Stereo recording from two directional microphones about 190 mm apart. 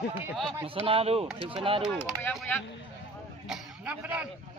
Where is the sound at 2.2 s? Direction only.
5° left (ahead or behind).